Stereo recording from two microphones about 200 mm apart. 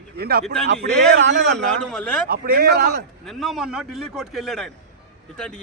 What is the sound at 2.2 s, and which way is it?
Speech, 50° right (ahead or behind).